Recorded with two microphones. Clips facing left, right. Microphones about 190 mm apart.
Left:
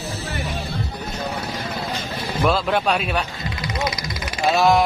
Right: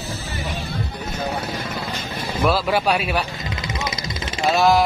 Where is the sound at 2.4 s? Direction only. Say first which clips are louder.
Right 1 dB; 5° right (ahead or behind).